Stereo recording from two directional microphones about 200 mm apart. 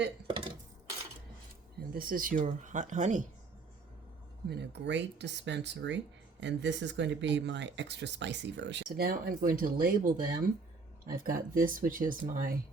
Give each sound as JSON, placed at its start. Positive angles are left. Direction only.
{"t": 0.3, "sound": "dishes", "side_deg": -25}
{"t": 1.9, "sound": "speech", "side_deg": -45}
{"t": 4.4, "sound": "speech", "side_deg": -55}